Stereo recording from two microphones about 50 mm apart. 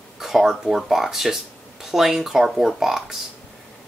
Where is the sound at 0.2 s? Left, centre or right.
Centre.